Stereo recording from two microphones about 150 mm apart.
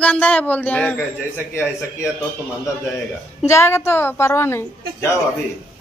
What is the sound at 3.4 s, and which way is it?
A man's voice, 15° left (ahead or behind).